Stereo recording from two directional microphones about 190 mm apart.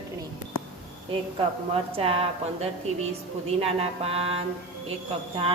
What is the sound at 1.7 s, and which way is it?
Mantra, 30° right (ahead or behind).